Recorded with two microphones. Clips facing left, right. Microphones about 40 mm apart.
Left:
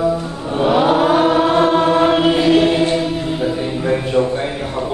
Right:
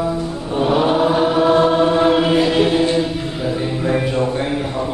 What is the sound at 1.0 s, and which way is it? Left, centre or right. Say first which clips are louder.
Chant: left 2 dB; left.